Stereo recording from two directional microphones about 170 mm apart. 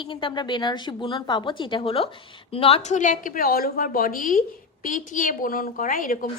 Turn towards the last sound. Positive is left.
turn(degrees=55)  # may be behind; listen again after turning